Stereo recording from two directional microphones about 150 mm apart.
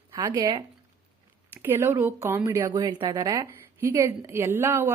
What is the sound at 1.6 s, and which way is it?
Speech, 15° right (ahead or behind).